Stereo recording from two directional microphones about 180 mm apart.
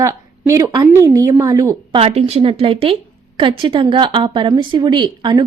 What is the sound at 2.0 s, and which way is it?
A woman's voice, 35° right (ahead or behind).